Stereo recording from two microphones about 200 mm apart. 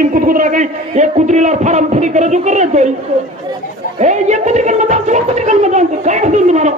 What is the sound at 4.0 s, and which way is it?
Music, 35° right (ahead or behind).